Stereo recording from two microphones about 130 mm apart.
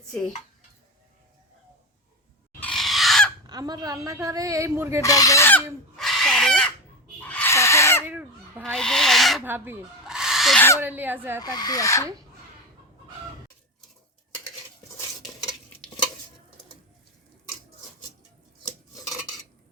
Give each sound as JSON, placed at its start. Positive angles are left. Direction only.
{"t": 2.6, "sound": "a sound", "side_deg": 5}
{"t": 3.4, "sound": "speech", "side_deg": -30}
{"t": 5.0, "sound": "speech", "side_deg": 25}
{"t": 6.0, "sound": "fowl", "side_deg": 0}
{"t": 7.2, "sound": "a sound", "side_deg": 10}
{"t": 7.5, "sound": "owl", "side_deg": 20}
{"t": 8.0, "sound": "fowl", "side_deg": -15}
{"t": 8.6, "sound": "owl", "side_deg": 5}
{"t": 9.4, "sound": "speech", "side_deg": -15}
{"t": 10.1, "sound": "owl", "side_deg": -5}
{"t": 10.8, "sound": "speech", "side_deg": -15}
{"t": 11.4, "sound": "speech", "side_deg": 30}